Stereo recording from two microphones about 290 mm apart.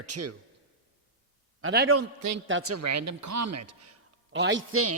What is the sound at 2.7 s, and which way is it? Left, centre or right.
Speech, right.